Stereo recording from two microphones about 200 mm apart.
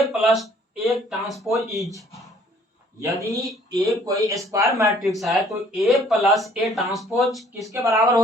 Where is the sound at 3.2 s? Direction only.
15° right (ahead or behind).